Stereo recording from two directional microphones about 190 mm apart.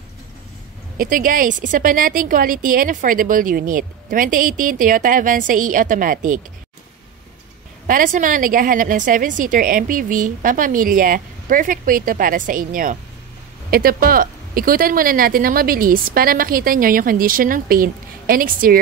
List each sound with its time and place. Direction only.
0.9 s speech: 45° right (ahead or behind)
7.8 s speech: 45° right (ahead or behind)